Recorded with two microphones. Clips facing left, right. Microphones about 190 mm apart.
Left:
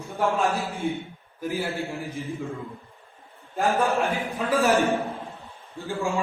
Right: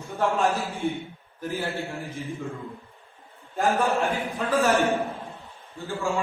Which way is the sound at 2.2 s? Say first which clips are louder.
Left 1 dB; centre (ahead or behind).